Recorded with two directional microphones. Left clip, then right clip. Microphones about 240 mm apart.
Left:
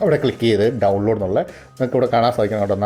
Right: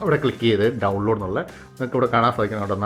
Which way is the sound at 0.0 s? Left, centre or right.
Centre.